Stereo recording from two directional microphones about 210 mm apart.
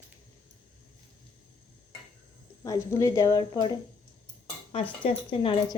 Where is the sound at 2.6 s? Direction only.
15° left (ahead or behind).